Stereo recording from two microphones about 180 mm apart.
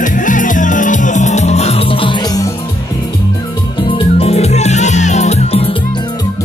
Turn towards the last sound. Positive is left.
turn(degrees=30)  # may be behind; listen again after turning